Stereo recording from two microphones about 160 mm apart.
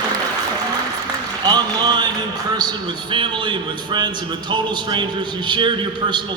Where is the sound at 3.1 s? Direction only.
30° right (ahead or behind).